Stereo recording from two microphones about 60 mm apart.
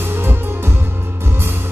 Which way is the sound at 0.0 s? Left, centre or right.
Right.